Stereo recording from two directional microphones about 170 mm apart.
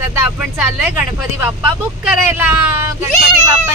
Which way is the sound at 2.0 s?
10° right (ahead or behind).